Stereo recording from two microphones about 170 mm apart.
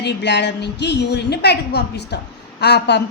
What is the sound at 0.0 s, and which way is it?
A woman's voice, 90° left.